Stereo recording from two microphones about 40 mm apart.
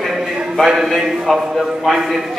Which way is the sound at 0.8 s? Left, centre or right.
Centre.